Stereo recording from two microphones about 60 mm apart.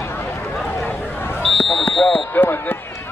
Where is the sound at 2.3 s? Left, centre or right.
Left.